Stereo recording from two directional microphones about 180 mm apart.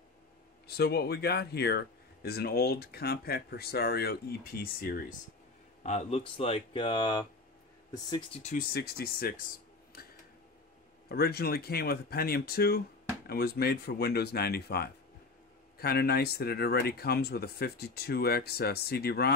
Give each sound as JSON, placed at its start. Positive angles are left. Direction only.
{"t": 0.7, "sound": "speech", "side_deg": 65}
{"t": 5.9, "sound": "speech", "side_deg": 35}
{"t": 8.4, "sound": "speech", "side_deg": 40}
{"t": 8.7, "sound": "speech", "side_deg": 60}
{"t": 9.9, "sound": "tick-tock", "side_deg": 55}
{"t": 11.1, "sound": "speech", "side_deg": 60}